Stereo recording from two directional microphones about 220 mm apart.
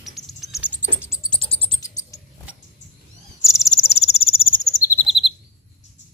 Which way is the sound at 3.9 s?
30° left (ahead or behind).